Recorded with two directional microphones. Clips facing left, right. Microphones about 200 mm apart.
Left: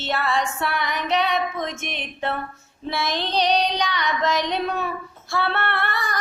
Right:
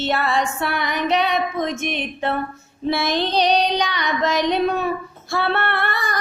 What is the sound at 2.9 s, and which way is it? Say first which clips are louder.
Female singing: right 4 dB; 55° right (ahead or behind).